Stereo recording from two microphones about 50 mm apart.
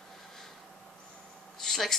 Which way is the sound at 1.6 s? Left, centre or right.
Centre.